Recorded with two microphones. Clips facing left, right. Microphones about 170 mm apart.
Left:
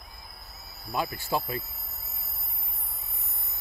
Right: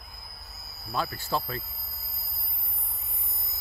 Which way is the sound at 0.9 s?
15° left (ahead or behind).